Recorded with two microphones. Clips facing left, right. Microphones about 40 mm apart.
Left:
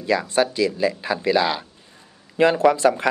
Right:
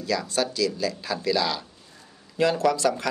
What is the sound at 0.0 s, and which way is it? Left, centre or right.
Speech, left.